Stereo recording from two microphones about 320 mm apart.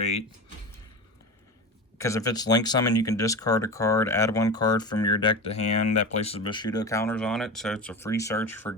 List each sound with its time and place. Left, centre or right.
0.0 s speech: centre
2.0 s speech: centre